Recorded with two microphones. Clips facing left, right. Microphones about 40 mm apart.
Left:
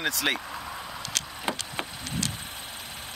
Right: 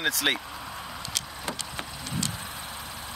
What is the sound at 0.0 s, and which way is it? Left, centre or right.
Speech, centre.